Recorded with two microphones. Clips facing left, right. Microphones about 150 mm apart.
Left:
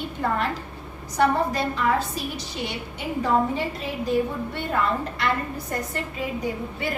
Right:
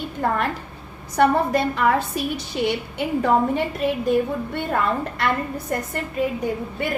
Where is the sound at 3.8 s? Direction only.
60° right (ahead or behind).